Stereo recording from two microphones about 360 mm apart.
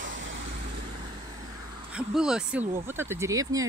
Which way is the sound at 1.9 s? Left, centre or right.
Centre.